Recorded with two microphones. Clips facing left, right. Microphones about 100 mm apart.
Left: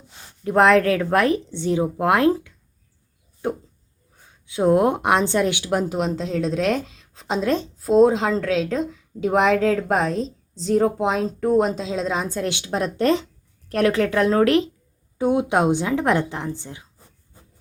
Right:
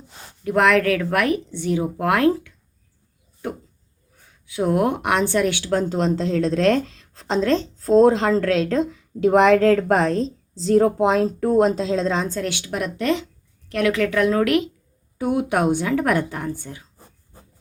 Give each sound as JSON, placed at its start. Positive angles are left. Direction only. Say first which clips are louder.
{"t": 0.4, "sound": "a woman's voice", "louder": "left 2 dB", "side_deg": 30}
{"t": 12.4, "sound": "a woman's voice", "louder": "left 1 dB", "side_deg": 20}